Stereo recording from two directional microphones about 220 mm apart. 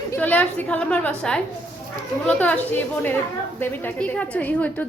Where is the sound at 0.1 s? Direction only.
5° left (ahead or behind).